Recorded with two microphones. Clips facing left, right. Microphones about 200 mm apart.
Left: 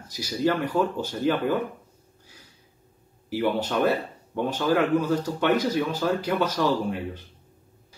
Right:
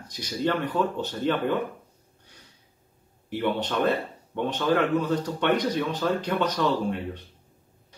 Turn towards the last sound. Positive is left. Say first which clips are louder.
# left 1 dB
turn(degrees=5)  # may be behind; listen again after turning